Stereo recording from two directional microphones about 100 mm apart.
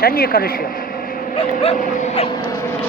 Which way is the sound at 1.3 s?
85° left.